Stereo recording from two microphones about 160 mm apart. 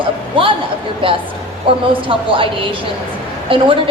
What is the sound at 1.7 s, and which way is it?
Speech, 35° right (ahead or behind).